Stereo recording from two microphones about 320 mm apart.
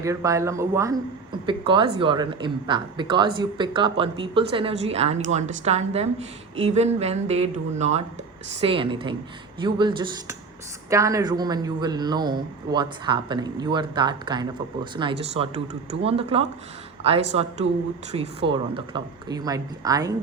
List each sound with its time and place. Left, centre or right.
0.0 s a woman's voice: centre